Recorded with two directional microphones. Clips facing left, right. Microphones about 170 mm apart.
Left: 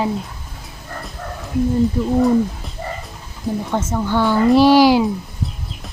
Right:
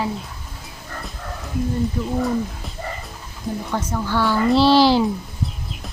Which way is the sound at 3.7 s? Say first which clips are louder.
Left 3 dB; 25° left (ahead or behind).